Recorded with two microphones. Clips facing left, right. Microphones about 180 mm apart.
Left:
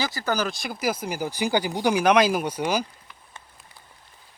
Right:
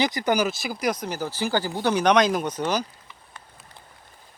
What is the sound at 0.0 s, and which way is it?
Speech, 20° right (ahead or behind).